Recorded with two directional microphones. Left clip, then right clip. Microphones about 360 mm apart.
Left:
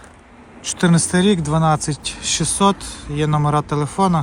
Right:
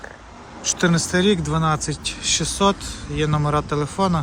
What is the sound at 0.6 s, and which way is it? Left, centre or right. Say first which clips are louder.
Speech: left 1 dB; centre.